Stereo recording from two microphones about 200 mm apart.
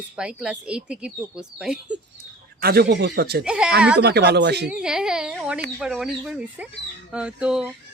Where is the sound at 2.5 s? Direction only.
50° right (ahead or behind).